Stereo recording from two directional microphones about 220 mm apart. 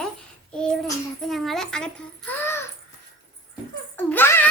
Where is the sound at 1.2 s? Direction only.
Centre (ahead or behind).